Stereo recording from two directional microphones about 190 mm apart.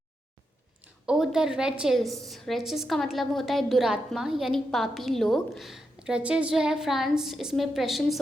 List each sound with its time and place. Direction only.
1.0 s a woman's voice: centre (ahead or behind)